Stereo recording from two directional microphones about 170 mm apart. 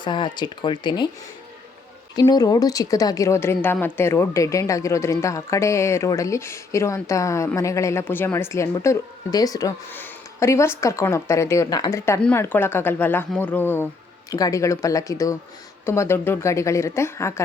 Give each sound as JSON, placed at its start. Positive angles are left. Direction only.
{"t": 0.0, "sound": "speech", "side_deg": 25}
{"t": 2.1, "sound": "a woman's voice", "side_deg": 25}